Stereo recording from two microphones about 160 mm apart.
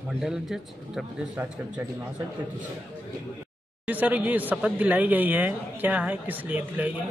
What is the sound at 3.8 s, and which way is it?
Speech, 10° right (ahead or behind).